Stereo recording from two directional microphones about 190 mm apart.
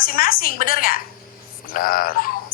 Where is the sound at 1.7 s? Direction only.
50° left (ahead or behind).